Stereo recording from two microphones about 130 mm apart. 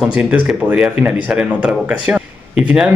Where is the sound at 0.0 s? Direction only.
5° right (ahead or behind).